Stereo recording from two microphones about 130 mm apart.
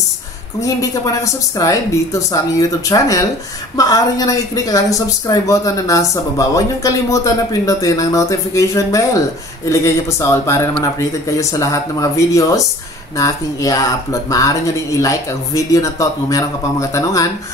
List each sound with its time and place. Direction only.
0.6 s speech: 25° left (ahead or behind)